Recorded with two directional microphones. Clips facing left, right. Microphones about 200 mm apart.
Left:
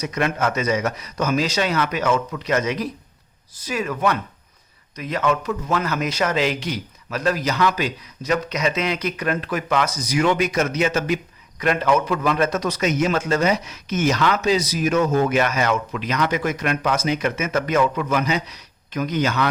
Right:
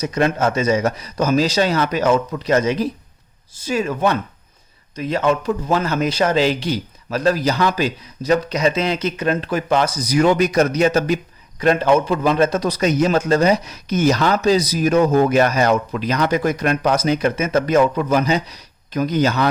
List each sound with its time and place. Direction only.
0.0 s a man's voice: 30° right (ahead or behind)